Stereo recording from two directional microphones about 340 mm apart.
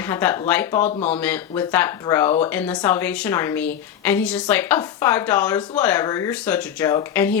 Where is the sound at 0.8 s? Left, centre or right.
Left.